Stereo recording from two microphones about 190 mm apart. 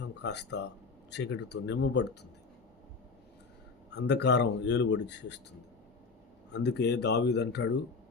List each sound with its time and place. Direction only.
0.0 s speech: 65° left (ahead or behind)
3.8 s speech: 65° left (ahead or behind)
6.5 s speech: 65° left (ahead or behind)